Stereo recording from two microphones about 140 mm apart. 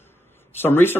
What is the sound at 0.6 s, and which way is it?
Speech, 15° left (ahead or behind).